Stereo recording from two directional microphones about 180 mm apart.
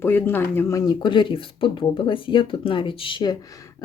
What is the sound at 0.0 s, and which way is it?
Speech, 10° left (ahead or behind).